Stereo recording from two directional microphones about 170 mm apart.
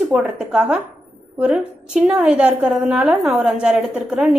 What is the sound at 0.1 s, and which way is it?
A woman's voice, 5° right (ahead or behind).